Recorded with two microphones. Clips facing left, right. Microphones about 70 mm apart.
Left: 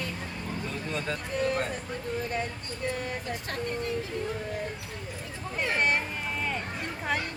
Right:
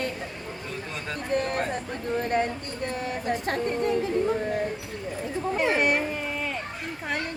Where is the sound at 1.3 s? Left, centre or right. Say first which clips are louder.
Right 4 dB; right.